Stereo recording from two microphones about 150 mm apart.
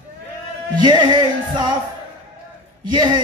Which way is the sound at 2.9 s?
30° right (ahead or behind).